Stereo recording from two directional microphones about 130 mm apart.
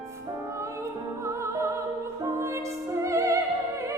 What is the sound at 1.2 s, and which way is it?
Music, 20° right (ahead or behind).